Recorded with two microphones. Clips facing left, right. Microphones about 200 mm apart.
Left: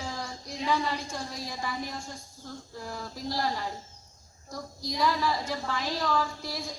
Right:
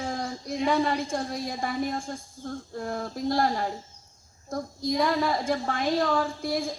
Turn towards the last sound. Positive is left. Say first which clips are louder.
# right 6 dB
turn(degrees=-55)  # may be behind; listen again after turning